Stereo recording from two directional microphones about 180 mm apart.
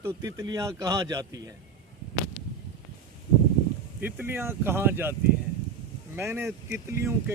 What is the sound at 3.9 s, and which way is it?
Speech, 10° right (ahead or behind).